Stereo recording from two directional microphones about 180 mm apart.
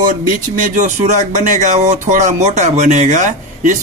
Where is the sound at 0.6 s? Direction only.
45° right (ahead or behind).